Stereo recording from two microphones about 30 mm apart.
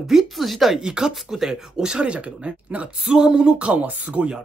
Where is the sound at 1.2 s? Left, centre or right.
Centre.